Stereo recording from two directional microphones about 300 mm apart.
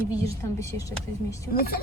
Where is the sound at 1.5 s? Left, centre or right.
Left.